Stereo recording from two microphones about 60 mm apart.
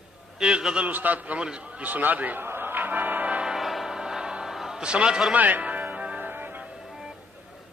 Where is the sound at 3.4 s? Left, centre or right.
Centre.